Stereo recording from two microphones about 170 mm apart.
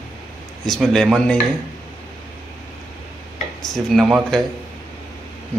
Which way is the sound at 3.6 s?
Centre (ahead or behind).